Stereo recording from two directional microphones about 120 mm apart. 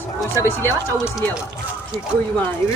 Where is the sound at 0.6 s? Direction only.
25° right (ahead or behind).